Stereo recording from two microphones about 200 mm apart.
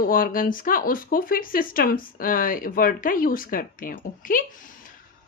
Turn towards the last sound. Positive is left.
turn(degrees=45)  # may be behind; listen again after turning